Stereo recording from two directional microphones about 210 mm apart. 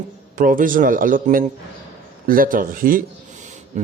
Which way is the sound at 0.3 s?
40° right (ahead or behind).